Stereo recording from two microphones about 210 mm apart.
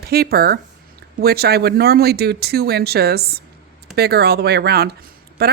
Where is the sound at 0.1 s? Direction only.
45° right (ahead or behind).